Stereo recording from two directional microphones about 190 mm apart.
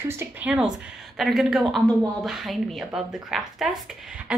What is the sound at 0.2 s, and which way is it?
A woman's voice, 10° right (ahead or behind).